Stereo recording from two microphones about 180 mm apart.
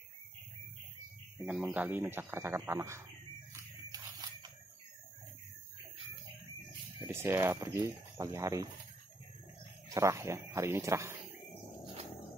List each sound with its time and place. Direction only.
1.4 s speech: 5° right (ahead or behind)
3.5 s a sound: 20° right (ahead or behind)
7.0 s speech: 15° right (ahead or behind)
9.8 s speech: 15° right (ahead or behind)